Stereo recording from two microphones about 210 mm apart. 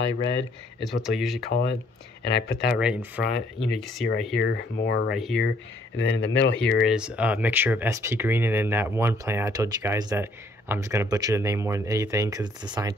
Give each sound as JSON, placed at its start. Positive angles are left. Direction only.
{"t": 1.0, "sound": "speech", "side_deg": 0}
{"t": 1.5, "sound": "speech", "side_deg": 50}
{"t": 2.7, "sound": "speech", "side_deg": -5}
{"t": 4.4, "sound": "speech", "side_deg": 50}
{"t": 5.1, "sound": "speech", "side_deg": 0}
{"t": 5.9, "sound": "speech", "side_deg": 55}
{"t": 6.9, "sound": "speech", "side_deg": -5}